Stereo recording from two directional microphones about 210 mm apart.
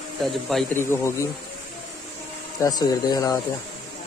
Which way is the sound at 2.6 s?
20° left (ahead or behind).